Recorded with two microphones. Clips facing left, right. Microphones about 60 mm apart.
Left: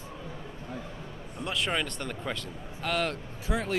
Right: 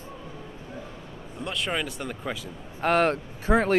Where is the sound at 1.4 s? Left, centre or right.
Centre.